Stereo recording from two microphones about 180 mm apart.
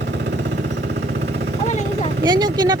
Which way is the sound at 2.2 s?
25° right (ahead or behind).